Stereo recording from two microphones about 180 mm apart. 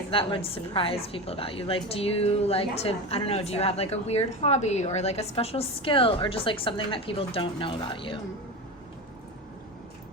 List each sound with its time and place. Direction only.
0.1 s a woman's voice: 30° left (ahead or behind)